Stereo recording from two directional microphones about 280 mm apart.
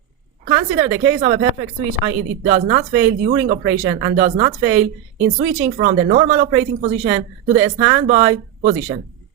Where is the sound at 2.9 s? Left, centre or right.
Right.